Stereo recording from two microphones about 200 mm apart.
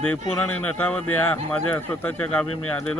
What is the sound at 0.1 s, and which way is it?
Speech, 10° left (ahead or behind).